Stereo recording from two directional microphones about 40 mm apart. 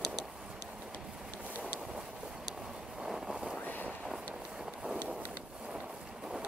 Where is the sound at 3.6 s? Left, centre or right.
Left.